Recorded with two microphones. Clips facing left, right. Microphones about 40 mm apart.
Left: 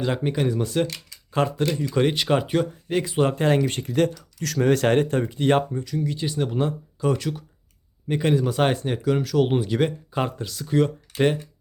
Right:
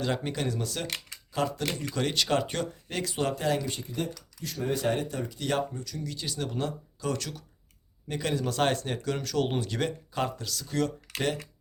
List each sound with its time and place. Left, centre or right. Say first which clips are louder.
0.0 s speech: left 6 dB; centre
0.9 s speech: even; right
1.9 s speech: left 5 dB; left
3.8 s speech: left 12 dB; left